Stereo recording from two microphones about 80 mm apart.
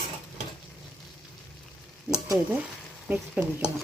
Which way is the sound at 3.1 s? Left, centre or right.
Centre.